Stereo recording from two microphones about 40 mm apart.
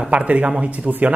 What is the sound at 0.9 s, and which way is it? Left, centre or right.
Speech, right.